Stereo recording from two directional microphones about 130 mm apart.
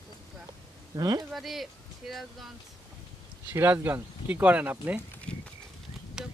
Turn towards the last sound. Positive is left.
turn(degrees=-5)  # may be behind; listen again after turning